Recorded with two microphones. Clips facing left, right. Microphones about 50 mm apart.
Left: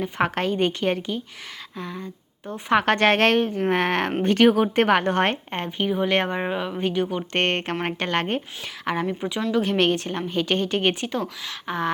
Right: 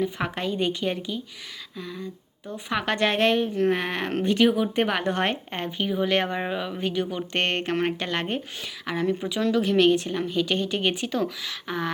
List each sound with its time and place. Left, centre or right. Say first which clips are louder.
0.0 s a woman's voice: left 4 dB; left
6.3 s speech: left 2 dB; centre
6.8 s a woman's voice: left 3 dB; left